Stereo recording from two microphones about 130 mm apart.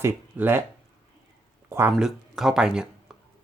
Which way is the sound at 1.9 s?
Centre (ahead or behind).